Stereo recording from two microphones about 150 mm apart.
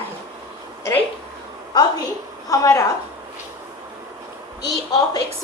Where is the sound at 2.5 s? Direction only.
20° left (ahead or behind).